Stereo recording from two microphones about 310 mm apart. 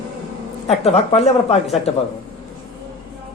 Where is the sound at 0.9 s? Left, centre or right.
Centre.